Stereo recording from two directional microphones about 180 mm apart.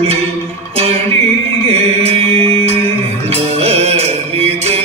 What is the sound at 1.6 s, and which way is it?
Music, 35° right (ahead or behind).